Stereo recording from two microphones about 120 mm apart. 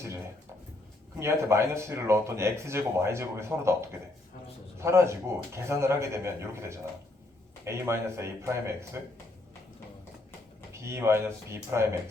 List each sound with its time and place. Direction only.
1.2 s speech: 25° right (ahead or behind)
10.7 s speech: 20° right (ahead or behind)